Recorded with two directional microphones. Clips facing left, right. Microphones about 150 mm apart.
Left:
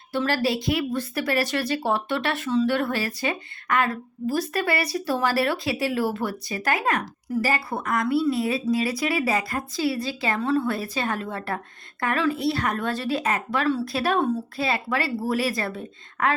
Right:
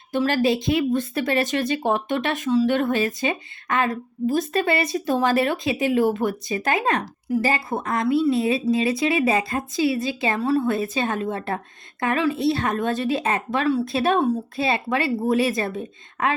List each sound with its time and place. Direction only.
0.1 s speech: 20° right (ahead or behind)
14.2 s a woman's voice: 10° right (ahead or behind)
14.6 s speech: 20° right (ahead or behind)